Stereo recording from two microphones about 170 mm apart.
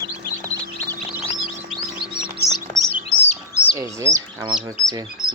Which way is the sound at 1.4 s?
Centre (ahead or behind).